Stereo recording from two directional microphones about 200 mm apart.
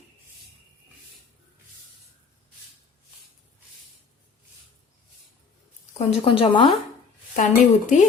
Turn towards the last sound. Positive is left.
turn(degrees=40)  # may be behind; listen again after turning